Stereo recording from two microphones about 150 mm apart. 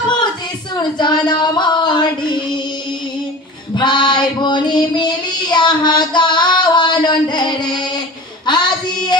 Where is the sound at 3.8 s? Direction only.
30° left (ahead or behind).